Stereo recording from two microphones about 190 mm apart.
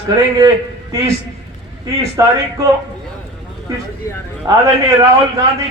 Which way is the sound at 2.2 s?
15° right (ahead or behind).